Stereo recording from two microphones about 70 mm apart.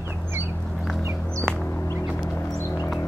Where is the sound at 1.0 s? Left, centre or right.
Right.